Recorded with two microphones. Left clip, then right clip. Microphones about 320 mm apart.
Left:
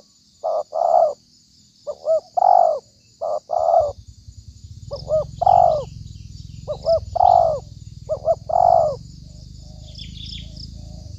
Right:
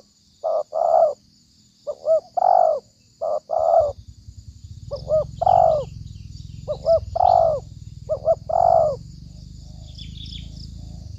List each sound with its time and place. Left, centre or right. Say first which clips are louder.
0.4 s bird: left 1 dB; centre
10.0 s chirp: left 3 dB; left